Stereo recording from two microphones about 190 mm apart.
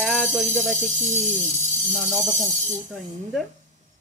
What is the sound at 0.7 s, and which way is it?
Speech, 40° right (ahead or behind).